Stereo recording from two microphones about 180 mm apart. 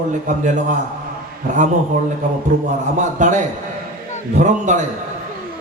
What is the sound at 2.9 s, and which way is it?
A man's voice, 45° right (ahead or behind).